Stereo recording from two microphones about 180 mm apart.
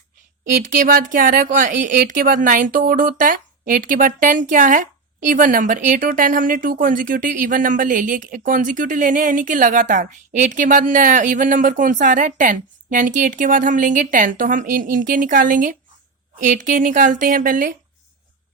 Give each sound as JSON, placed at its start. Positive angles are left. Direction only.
{"t": 0.9, "sound": "speech", "side_deg": -50}